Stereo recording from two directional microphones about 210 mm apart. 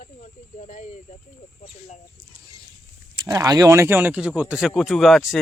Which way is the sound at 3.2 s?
15° right (ahead or behind).